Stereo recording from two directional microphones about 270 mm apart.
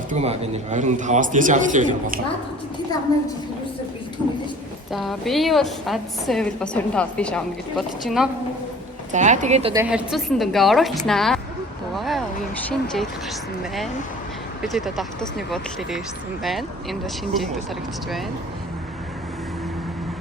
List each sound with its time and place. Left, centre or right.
0.1 s a man's voice: right
4.9 s a woman's voice: centre
9.1 s a man's voice: right
9.7 s a woman's voice: centre
11.9 s a sound: centre
14.6 s a woman's voice: centre